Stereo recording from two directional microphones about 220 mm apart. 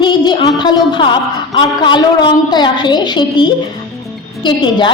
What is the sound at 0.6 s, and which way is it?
Music, 20° left (ahead or behind).